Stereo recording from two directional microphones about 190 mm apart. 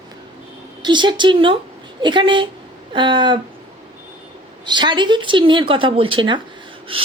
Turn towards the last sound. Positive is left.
turn(degrees=-30)  # may be behind; listen again after turning